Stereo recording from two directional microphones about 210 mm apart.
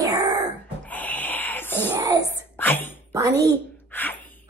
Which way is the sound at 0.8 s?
10° left (ahead or behind).